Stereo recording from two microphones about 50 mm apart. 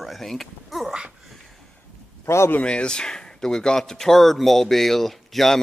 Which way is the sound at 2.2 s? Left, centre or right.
Left.